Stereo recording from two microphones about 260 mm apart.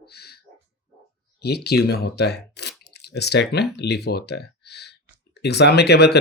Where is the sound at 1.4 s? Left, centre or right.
Left.